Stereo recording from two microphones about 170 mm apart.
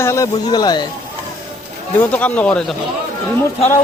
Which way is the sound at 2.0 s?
10° left (ahead or behind).